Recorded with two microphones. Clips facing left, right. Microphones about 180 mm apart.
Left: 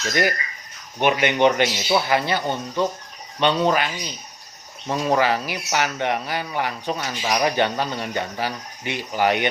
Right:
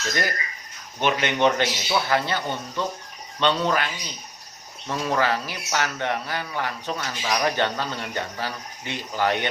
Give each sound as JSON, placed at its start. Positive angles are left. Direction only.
{"t": 0.1, "sound": "speech", "side_deg": 15}